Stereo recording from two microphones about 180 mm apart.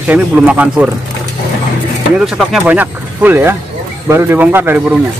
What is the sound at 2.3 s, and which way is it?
Speech, 5° right (ahead or behind).